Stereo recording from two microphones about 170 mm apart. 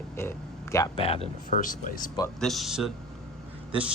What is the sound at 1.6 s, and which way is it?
Speech, 50° left (ahead or behind).